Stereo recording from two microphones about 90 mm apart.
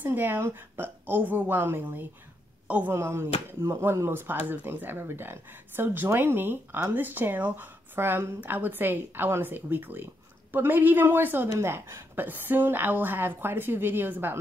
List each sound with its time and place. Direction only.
0.0 s speech: 20° right (ahead or behind)